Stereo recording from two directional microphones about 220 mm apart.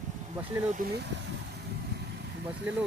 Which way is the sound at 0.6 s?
40° right (ahead or behind).